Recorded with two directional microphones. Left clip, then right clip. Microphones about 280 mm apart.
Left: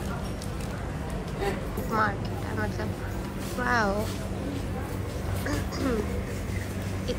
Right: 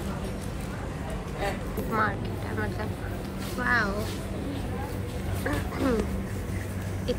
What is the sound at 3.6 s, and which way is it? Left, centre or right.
Speech, centre.